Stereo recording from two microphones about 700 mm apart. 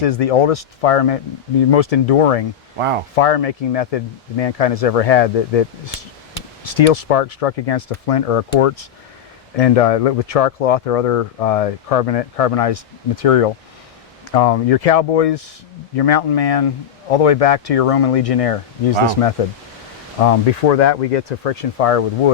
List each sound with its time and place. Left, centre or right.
0.0 s speech: left
2.7 s speech: right
3.2 s speech: left
20.2 s speech: left